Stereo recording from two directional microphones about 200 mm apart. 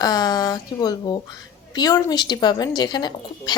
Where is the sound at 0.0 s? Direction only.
20° left (ahead or behind).